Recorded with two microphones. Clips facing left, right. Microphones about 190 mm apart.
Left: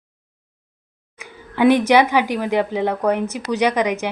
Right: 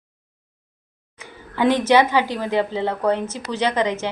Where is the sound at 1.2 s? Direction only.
15° left (ahead or behind).